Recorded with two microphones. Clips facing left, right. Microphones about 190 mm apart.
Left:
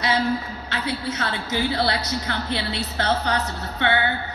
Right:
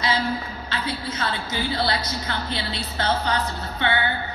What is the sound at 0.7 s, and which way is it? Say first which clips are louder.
A woman's voice: left 2 dB; 70° left (ahead or behind).